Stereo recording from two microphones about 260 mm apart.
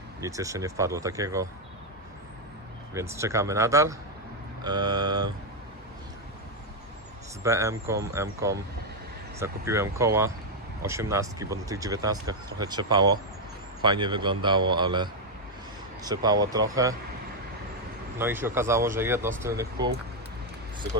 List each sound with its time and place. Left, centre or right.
0.2 s speech: centre
2.9 s speech: centre
7.4 s speech: centre
18.2 s speech: centre